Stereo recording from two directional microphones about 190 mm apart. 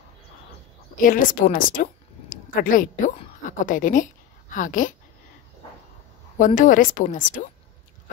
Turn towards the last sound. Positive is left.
turn(degrees=40)  # may be behind; listen again after turning